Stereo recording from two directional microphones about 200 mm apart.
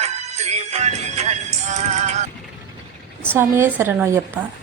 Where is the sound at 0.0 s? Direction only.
35° right (ahead or behind).